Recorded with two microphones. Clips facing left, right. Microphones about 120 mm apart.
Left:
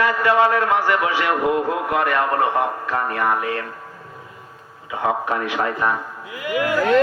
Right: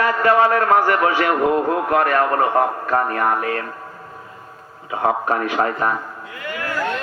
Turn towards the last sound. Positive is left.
turn(degrees=15)  # may be behind; listen again after turning